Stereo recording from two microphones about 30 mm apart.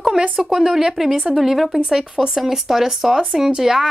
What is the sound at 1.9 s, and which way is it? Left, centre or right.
A woman's voice, right.